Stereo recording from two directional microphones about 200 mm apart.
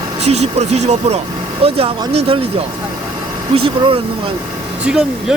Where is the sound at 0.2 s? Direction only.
35° right (ahead or behind).